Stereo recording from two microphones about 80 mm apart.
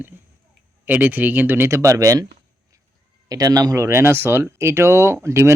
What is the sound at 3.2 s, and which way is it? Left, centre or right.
Speech, right.